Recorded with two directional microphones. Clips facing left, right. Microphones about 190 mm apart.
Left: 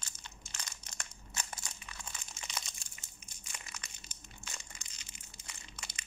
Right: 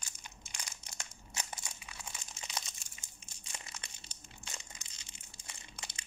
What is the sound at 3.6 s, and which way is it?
Crushing, 30° right (ahead or behind).